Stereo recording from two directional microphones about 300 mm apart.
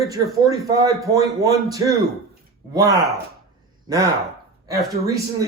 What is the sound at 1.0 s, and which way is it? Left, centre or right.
Speech, centre.